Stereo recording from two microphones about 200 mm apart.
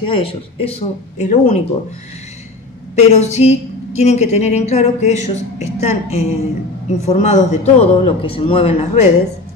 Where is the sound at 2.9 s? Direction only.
35° left (ahead or behind).